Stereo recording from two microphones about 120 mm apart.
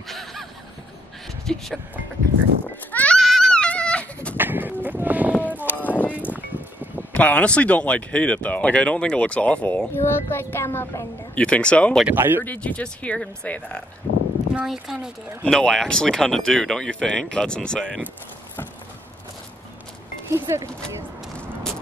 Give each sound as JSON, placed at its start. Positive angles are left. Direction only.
{"t": 0.1, "sound": "snicker", "side_deg": 0}
{"t": 1.4, "sound": "speech", "side_deg": 5}
{"t": 2.9, "sound": "goat", "side_deg": 15}
{"t": 3.2, "sound": "goat", "side_deg": 0}
{"t": 4.4, "sound": "sheep", "side_deg": -15}
{"t": 4.8, "sound": "a sound", "side_deg": -15}
{"t": 5.9, "sound": "a sound", "side_deg": 15}
{"t": 6.3, "sound": "a sound", "side_deg": -15}
{"t": 7.1, "sound": "speech", "side_deg": 10}
{"t": 12.2, "sound": "speech", "side_deg": -15}
{"t": 12.4, "sound": "speech", "side_deg": 10}
{"t": 14.5, "sound": "speech", "side_deg": -5}
{"t": 15.4, "sound": "speech", "side_deg": 5}
{"t": 20.2, "sound": "speech", "side_deg": -25}